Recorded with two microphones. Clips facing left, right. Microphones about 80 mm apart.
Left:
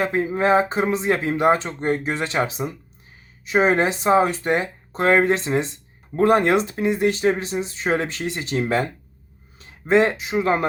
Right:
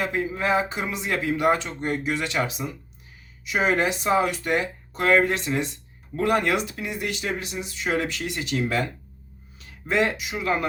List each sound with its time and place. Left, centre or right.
0.0 s speech: left
9.9 s speech: left